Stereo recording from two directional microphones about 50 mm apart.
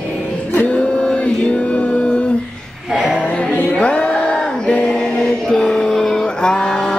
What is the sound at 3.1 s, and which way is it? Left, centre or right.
Music, left.